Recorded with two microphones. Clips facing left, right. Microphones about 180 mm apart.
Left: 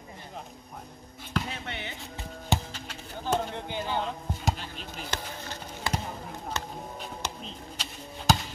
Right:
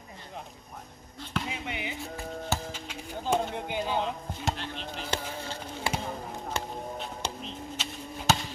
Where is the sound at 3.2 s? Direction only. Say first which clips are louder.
Right 1 dB; 15° right (ahead or behind).